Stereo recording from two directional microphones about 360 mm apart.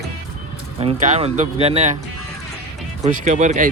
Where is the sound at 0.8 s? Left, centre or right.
Centre.